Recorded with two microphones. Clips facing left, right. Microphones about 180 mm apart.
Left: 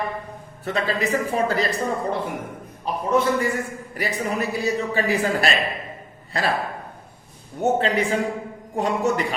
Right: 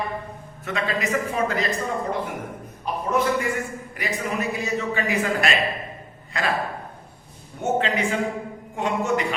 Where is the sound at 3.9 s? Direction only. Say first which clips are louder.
Left 2 dB; 35° left (ahead or behind).